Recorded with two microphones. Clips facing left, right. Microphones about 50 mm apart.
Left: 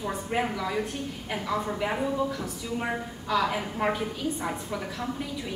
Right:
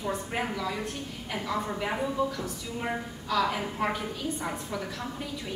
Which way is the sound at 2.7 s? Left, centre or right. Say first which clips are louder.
Left 2 dB; centre.